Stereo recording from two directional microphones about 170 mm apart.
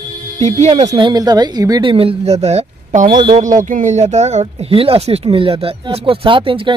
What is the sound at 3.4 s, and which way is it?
Speech, 50° right (ahead or behind).